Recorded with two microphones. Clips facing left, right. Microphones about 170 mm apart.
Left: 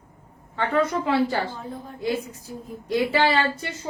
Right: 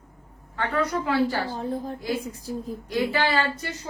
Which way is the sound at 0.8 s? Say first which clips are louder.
Left 2 dB; 25° left (ahead or behind).